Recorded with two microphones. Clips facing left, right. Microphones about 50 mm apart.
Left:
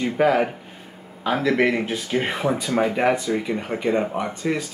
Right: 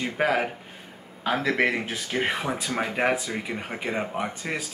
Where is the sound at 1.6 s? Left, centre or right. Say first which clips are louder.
Left 4 dB; centre.